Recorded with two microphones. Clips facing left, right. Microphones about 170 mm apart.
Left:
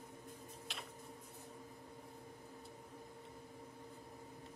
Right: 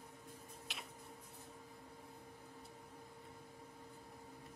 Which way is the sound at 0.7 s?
Centre (ahead or behind).